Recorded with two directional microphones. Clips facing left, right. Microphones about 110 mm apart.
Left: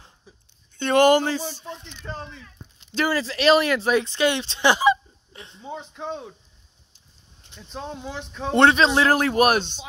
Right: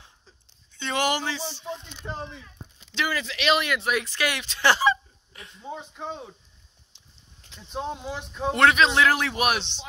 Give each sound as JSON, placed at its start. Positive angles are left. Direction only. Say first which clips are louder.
{"t": 0.7, "sound": "speech", "louder": "left 10 dB", "side_deg": 50}
{"t": 1.6, "sound": "speech", "louder": "right 2 dB", "side_deg": -15}
{"t": 2.9, "sound": "speech", "louder": "left 5 dB", "side_deg": 40}
{"t": 4.6, "sound": "speech", "louder": "left 3 dB", "side_deg": 15}
{"t": 5.3, "sound": "speech", "louder": "left 2 dB", "side_deg": 30}
{"t": 5.6, "sound": "speech", "louder": "left 2 dB", "side_deg": 0}
{"t": 7.7, "sound": "speech", "louder": "right 2 dB", "side_deg": -10}
{"t": 8.5, "sound": "a man's voice", "louder": "left 3 dB", "side_deg": 30}
{"t": 9.1, "sound": "speech", "louder": "left 6 dB", "side_deg": 45}